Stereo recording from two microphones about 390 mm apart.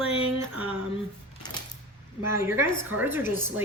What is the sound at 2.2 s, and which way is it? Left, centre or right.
Speech, centre.